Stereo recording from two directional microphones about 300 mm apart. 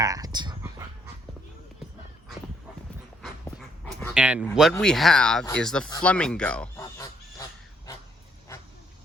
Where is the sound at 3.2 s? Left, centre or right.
Centre.